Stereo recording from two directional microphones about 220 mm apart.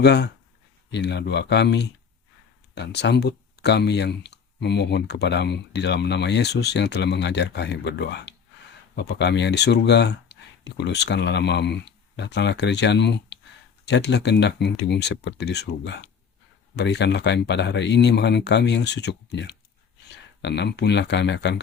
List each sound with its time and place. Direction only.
0.0 s speech: 50° left (ahead or behind)